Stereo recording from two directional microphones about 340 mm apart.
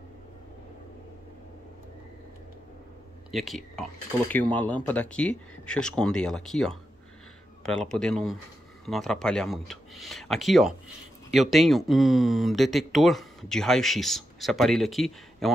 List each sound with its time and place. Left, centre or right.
3.3 s speech: centre